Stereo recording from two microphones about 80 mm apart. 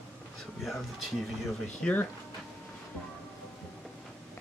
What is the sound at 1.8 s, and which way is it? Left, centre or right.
Speech, centre.